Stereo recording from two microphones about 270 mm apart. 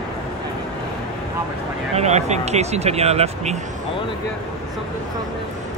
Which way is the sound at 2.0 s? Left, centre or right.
Right.